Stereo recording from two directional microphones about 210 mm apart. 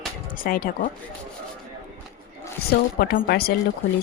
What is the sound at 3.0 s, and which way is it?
Speech, 50° left (ahead or behind).